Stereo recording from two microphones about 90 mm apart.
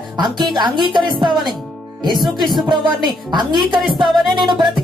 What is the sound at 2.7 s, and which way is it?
Speech, 60° right (ahead or behind).